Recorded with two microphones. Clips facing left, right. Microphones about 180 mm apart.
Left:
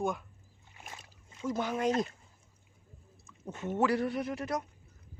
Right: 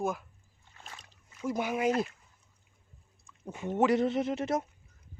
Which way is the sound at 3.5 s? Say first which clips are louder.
Right 3 dB; 15° right (ahead or behind).